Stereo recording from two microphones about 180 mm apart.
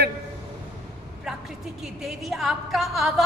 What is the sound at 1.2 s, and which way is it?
A woman's voice, centre (ahead or behind).